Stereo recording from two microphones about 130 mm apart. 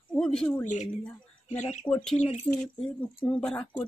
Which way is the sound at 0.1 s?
5° left (ahead or behind).